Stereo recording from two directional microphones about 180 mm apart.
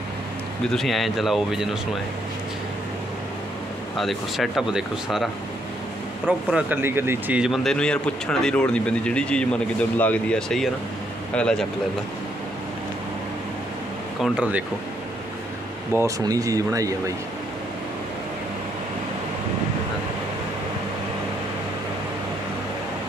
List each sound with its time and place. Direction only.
0.7 s a man's voice: centre (ahead or behind)
3.9 s a man's voice: centre (ahead or behind)
6.5 s a man's voice: 10° right (ahead or behind); by 11.6 s 5° left (ahead or behind)
14.2 s a man's voice: 5° right (ahead or behind)
16.0 s speech: 20° right (ahead or behind)